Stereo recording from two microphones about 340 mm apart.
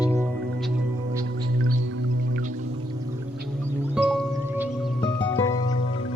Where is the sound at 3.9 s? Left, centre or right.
Centre.